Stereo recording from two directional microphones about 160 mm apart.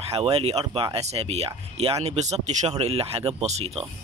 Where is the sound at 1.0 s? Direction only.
40° right (ahead or behind).